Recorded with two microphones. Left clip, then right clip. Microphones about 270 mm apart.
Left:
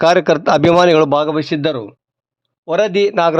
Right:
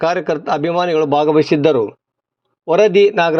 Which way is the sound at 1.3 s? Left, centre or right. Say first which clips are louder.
Right 5 dB; centre.